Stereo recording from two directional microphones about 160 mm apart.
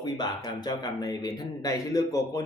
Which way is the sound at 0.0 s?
25° left (ahead or behind).